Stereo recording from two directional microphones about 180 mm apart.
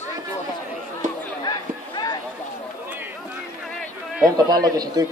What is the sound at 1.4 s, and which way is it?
Chatter, 25° left (ahead or behind).